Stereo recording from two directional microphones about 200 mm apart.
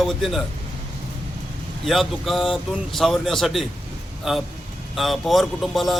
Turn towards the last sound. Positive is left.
turn(degrees=0)  # may be behind; listen again after turning